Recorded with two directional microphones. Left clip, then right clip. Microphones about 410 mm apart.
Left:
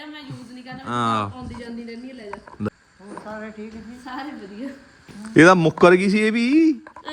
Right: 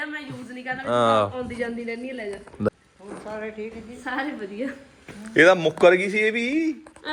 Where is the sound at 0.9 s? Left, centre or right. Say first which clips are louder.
Right 3 dB; centre.